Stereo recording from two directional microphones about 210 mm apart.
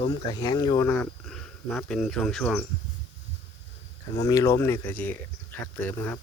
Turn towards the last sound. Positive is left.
turn(degrees=5)  # may be behind; listen again after turning